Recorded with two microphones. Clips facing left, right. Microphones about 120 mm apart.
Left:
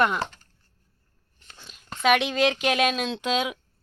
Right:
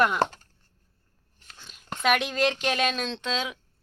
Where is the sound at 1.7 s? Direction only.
Centre (ahead or behind).